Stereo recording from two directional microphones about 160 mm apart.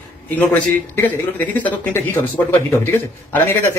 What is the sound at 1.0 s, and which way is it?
Speech, 10° left (ahead or behind).